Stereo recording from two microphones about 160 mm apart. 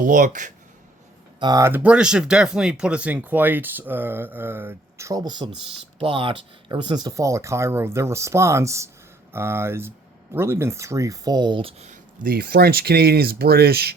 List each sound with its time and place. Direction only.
0.0 s speech: 55° right (ahead or behind)
1.4 s speech: 20° right (ahead or behind); by 11.9 s 40° right (ahead or behind)
12.2 s speech: 70° right (ahead or behind)